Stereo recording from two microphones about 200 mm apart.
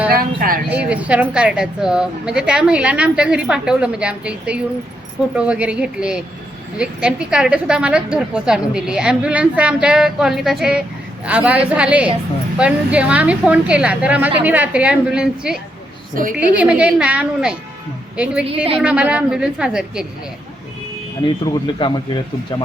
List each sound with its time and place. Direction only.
0.1 s speech: 45° right (ahead or behind)
0.7 s a woman's voice: 5° right (ahead or behind)
18.4 s a woman's voice: 30° right (ahead or behind)
18.8 s a woman's voice: 5° right (ahead or behind)
21.4 s speech: 25° left (ahead or behind)